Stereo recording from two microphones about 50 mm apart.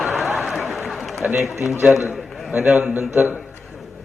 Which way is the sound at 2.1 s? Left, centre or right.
Centre.